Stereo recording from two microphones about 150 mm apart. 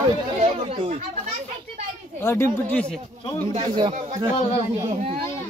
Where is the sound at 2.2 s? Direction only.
15° left (ahead or behind).